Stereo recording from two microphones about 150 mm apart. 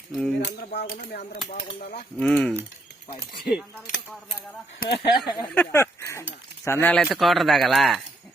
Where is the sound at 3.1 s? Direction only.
90° left.